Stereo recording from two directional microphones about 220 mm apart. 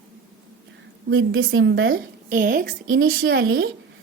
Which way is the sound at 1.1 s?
60° right (ahead or behind).